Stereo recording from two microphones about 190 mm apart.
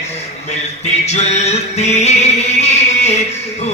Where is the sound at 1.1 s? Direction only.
35° left (ahead or behind).